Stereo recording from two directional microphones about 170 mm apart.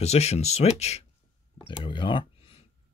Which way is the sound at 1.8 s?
30° left (ahead or behind).